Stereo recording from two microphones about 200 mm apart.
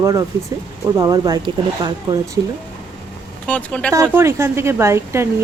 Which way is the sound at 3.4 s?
5° left (ahead or behind).